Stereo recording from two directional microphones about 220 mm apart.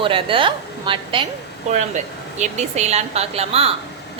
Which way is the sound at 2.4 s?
30° right (ahead or behind).